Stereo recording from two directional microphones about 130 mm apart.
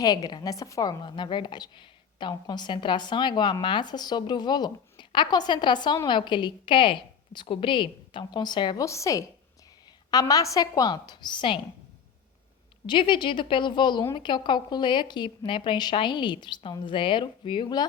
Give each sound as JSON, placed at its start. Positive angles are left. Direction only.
{"t": 0.0, "sound": "a woman's voice", "side_deg": 30}
{"t": 8.8, "sound": "a woman's voice", "side_deg": 25}
{"t": 12.8, "sound": "a woman's voice", "side_deg": 40}